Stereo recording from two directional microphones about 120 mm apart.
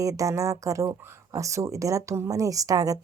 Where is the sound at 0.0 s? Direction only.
25° right (ahead or behind).